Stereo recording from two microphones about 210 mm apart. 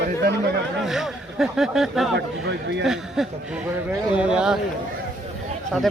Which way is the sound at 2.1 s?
55° right (ahead or behind).